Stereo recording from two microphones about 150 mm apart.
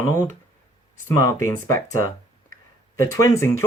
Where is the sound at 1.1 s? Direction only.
20° left (ahead or behind).